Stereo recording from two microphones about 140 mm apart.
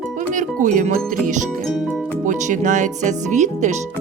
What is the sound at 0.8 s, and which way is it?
Music, 65° right (ahead or behind).